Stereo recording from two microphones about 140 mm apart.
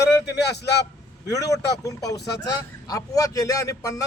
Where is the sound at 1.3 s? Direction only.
25° left (ahead or behind).